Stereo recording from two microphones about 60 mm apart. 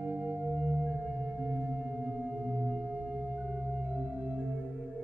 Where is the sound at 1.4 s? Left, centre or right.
Right.